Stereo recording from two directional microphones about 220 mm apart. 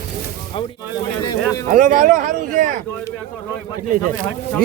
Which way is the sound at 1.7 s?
35° right (ahead or behind).